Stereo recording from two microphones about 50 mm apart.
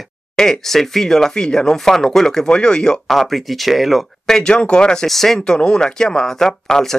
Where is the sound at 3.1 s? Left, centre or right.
Centre.